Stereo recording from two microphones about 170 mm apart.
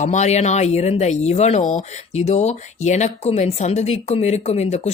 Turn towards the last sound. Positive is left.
turn(degrees=40)  # may be behind; listen again after turning